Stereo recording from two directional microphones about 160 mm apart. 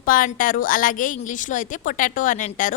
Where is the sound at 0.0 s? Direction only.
60° left (ahead or behind).